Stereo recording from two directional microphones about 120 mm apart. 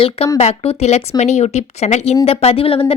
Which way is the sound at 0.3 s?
60° left (ahead or behind).